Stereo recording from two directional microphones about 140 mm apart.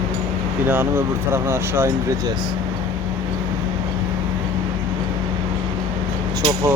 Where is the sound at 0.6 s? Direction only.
15° right (ahead or behind).